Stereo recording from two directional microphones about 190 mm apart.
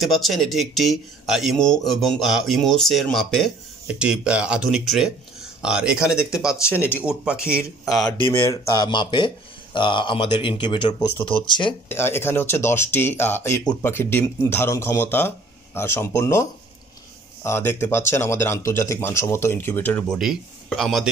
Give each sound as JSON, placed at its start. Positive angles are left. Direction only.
{"t": 0.0, "sound": "speech", "side_deg": 0}
{"t": 7.9, "sound": "speech", "side_deg": 20}
{"t": 11.9, "sound": "speech", "side_deg": 10}